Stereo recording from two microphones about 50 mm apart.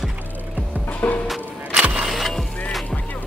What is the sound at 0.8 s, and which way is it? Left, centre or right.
Music, left.